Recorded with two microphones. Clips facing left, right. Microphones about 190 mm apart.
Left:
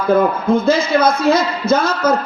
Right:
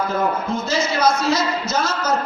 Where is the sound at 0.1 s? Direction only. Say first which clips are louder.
Left 8 dB; 55° left (ahead or behind).